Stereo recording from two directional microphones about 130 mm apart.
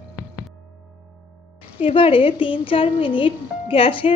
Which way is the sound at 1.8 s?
45° left (ahead or behind).